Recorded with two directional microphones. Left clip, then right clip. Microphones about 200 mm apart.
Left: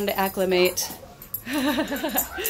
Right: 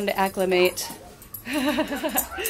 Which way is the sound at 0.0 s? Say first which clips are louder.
Right 1 dB; 10° left (ahead or behind).